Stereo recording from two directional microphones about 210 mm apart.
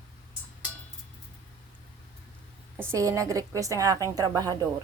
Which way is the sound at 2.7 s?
15° right (ahead or behind).